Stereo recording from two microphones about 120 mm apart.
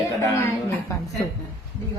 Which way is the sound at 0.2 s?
25° left (ahead or behind).